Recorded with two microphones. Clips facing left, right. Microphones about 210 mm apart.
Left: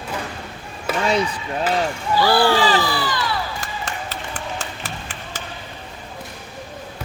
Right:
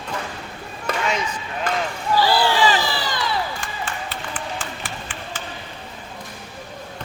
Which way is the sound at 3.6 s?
40° left (ahead or behind).